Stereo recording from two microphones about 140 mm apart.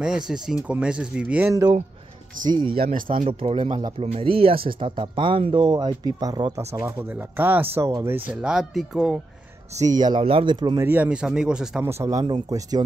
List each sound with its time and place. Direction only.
0.0 s speech: 5° right (ahead or behind)
1.5 s speech: 25° right (ahead or behind)
2.8 s speech: 80° right
3.3 s speech: 40° right (ahead or behind)
6.7 s speech: 15° right (ahead or behind)
8.4 s speech: 5° right (ahead or behind)
9.8 s speech: 30° right (ahead or behind)
10.8 s speech: 15° right (ahead or behind)
11.8 s speech: 20° right (ahead or behind)